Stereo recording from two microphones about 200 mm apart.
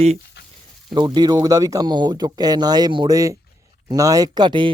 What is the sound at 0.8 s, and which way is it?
Speech, 20° right (ahead or behind).